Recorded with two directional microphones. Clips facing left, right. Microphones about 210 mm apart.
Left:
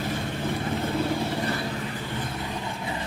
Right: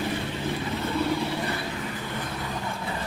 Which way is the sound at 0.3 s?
50° left (ahead or behind).